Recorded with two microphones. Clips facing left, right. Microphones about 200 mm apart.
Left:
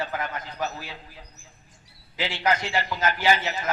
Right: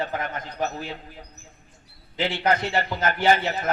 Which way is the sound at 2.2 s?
55° right (ahead or behind).